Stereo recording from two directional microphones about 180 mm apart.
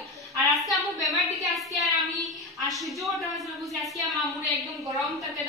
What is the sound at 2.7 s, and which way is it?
A woman's voice, centre (ahead or behind).